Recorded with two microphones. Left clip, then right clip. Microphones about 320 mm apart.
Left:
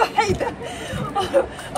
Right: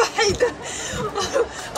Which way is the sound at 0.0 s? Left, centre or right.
Centre.